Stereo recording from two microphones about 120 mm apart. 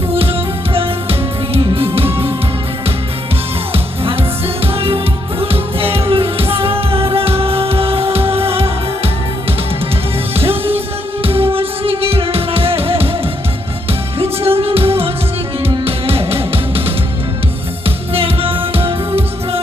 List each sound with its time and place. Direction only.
0.1 s music: 55° right (ahead or behind)
3.7 s music: 50° right (ahead or behind)
10.3 s music: 55° right (ahead or behind)
14.2 s music: 55° right (ahead or behind)